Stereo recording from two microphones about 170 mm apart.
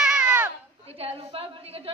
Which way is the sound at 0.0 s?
5° right (ahead or behind).